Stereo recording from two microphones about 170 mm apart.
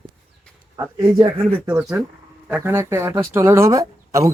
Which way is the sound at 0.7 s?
25° right (ahead or behind).